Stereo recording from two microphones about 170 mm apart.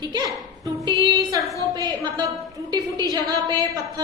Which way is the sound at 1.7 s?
25° right (ahead or behind).